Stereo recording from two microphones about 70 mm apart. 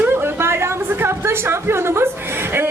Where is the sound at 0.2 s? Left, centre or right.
Right.